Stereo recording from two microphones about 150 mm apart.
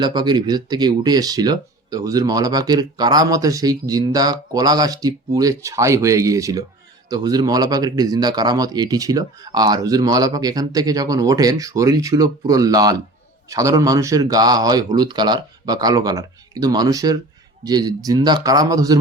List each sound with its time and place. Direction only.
0.0 s speech: 30° right (ahead or behind)